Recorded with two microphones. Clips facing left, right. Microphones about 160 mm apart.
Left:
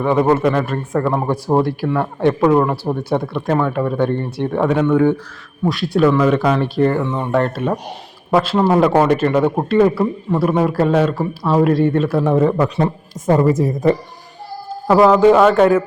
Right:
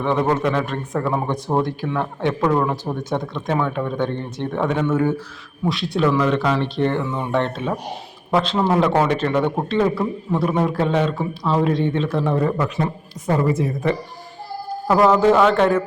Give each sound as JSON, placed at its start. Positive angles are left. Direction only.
{"t": 0.0, "sound": "speech", "side_deg": 10}
{"t": 12.2, "sound": "speech", "side_deg": 20}
{"t": 12.5, "sound": "speech", "side_deg": 35}
{"t": 14.8, "sound": "a man's voice", "side_deg": 10}